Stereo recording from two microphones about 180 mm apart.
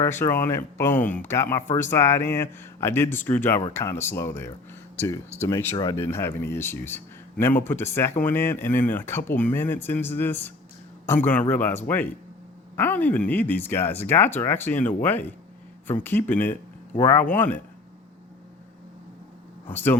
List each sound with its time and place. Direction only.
0.0 s speech: 15° left (ahead or behind)
19.7 s speech: 10° left (ahead or behind)